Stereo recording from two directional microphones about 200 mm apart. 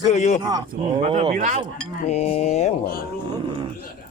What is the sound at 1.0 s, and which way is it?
Speech, 30° right (ahead or behind).